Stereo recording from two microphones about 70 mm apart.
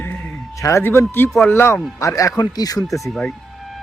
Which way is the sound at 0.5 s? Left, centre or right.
Left.